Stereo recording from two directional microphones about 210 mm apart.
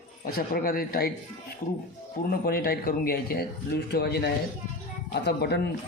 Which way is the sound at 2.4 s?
45° left (ahead or behind).